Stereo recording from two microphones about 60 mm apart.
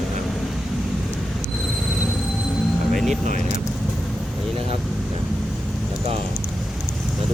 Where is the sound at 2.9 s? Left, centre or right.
Centre.